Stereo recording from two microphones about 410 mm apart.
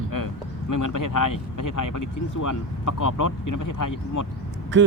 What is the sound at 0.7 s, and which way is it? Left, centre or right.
Speech, left.